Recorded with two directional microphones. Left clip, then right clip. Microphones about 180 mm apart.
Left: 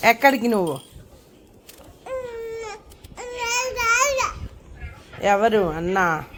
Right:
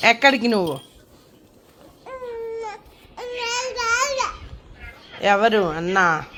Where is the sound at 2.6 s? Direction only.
25° left (ahead or behind).